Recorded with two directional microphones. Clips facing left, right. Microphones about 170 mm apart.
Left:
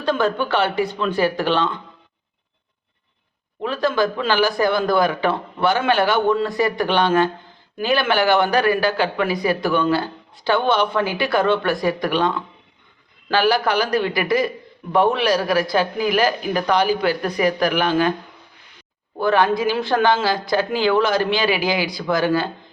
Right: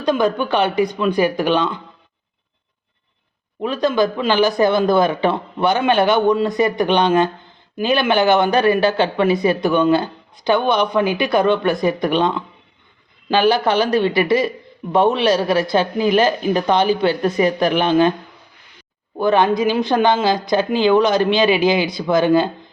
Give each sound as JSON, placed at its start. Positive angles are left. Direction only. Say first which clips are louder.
{"t": 0.0, "sound": "speech", "louder": "right 3 dB", "side_deg": -15}
{"t": 3.6, "sound": "speech", "louder": "right 3 dB", "side_deg": -20}
{"t": 19.1, "sound": "speech", "louder": "right 2 dB", "side_deg": -20}